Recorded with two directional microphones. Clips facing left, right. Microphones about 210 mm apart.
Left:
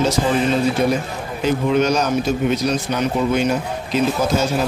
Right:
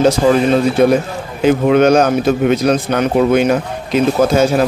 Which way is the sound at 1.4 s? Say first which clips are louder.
Right 7 dB; 60° right (ahead or behind).